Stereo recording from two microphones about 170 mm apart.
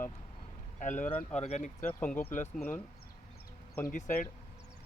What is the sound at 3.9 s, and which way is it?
Speech, 50° left (ahead or behind).